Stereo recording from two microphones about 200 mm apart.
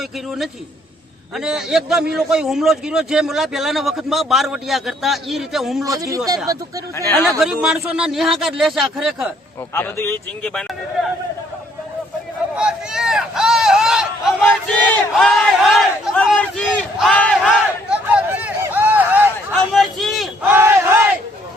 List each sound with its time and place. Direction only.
0.0 s a man's voice: centre (ahead or behind)
5.8 s speech: 15° right (ahead or behind)
7.3 s a man's voice: centre (ahead or behind)
9.7 s a man's voice: 10° left (ahead or behind)
12.5 s a sound: 5° right (ahead or behind)
17.8 s a sound: 5° right (ahead or behind)
20.6 s battle cry: 15° right (ahead or behind)